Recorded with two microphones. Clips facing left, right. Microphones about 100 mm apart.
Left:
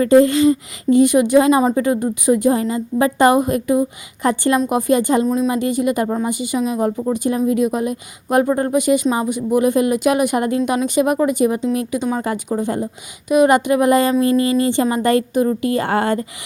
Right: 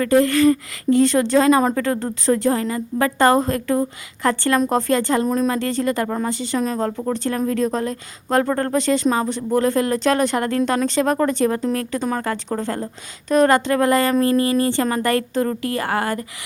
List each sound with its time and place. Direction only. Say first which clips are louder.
0.0 s speech: left 3 dB; 20° left (ahead or behind)
5.2 s speech: left 2 dB; centre (ahead or behind)
5.5 s speech: left 3 dB; 15° left (ahead or behind)